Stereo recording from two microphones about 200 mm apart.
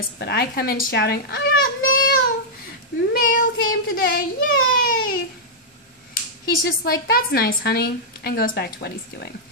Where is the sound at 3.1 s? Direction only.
45° left (ahead or behind).